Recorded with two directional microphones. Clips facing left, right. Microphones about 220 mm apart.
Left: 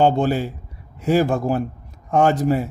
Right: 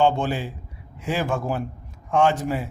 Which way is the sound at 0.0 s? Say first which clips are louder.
Left 4 dB; 40° left (ahead or behind).